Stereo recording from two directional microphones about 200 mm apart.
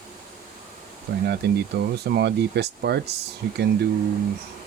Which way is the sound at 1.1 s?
50° right (ahead or behind).